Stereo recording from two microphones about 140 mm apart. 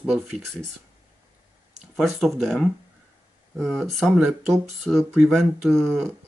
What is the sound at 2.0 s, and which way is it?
Speech, centre (ahead or behind).